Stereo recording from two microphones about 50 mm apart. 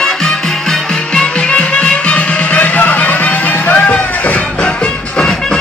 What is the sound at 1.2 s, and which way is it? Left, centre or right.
Music, left.